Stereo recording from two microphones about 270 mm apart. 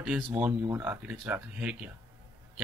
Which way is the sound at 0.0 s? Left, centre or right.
Centre.